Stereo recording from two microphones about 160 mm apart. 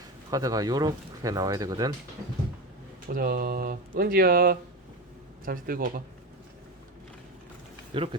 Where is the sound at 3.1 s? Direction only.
65° right (ahead or behind).